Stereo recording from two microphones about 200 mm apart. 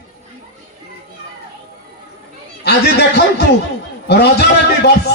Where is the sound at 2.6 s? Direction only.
55° left (ahead or behind).